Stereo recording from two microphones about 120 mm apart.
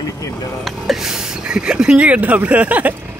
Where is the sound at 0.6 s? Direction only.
Centre (ahead or behind).